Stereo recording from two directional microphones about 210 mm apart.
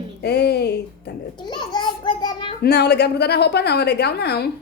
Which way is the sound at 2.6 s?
50° left (ahead or behind).